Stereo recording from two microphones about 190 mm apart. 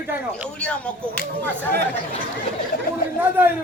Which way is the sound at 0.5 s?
5° left (ahead or behind).